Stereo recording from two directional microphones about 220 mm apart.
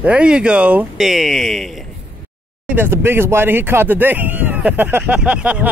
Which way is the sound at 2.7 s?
10° right (ahead or behind).